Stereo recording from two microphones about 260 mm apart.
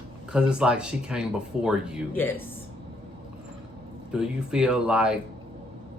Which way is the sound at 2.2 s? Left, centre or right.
Centre.